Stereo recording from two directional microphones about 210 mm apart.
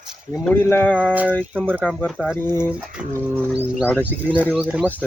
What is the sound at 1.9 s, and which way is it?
Speech, 5° left (ahead or behind).